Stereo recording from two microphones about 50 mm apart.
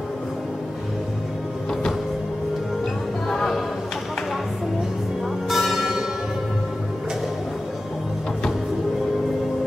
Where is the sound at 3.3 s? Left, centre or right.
Centre.